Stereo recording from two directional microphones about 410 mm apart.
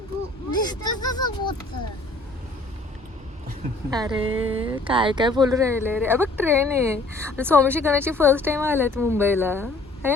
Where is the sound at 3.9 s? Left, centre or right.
Centre.